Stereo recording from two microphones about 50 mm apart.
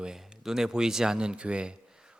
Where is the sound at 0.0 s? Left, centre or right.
Centre.